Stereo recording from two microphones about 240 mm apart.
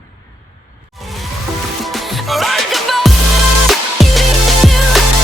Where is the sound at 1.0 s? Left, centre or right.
Centre.